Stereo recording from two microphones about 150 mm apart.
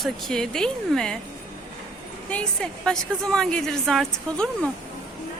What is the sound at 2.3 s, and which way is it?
A woman's voice, 5° left (ahead or behind).